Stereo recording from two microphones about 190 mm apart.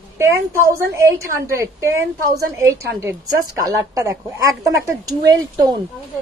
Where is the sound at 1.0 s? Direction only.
15° right (ahead or behind).